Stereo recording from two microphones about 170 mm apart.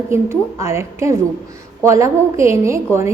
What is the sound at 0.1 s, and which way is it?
A woman's voice, 15° right (ahead or behind).